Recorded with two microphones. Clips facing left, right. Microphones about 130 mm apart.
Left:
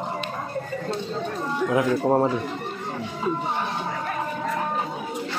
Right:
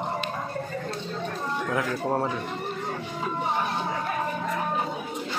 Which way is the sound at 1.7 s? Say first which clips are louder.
Left 7 dB; 20° left (ahead or behind).